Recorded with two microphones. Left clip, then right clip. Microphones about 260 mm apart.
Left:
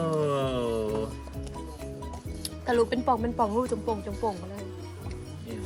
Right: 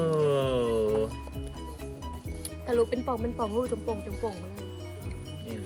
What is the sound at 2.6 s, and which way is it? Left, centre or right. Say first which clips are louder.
Speech: left 2 dB; left.